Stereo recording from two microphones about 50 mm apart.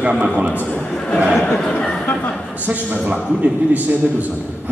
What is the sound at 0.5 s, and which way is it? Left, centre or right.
Speech, left.